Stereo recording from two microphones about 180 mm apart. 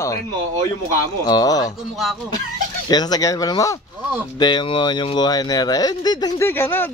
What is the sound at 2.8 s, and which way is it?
Speech, 20° left (ahead or behind).